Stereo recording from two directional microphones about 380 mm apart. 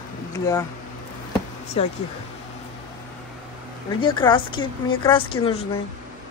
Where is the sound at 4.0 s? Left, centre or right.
Centre.